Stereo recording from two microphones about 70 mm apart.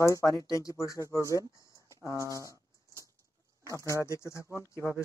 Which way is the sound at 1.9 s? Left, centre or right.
Left.